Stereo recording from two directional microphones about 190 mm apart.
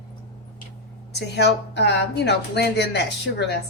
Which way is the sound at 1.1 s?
60° left (ahead or behind).